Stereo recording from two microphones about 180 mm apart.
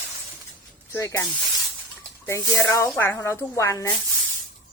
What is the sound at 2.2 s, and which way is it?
Speech, 10° left (ahead or behind).